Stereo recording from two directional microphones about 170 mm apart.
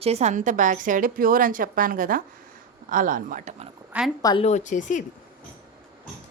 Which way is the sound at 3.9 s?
10° right (ahead or behind).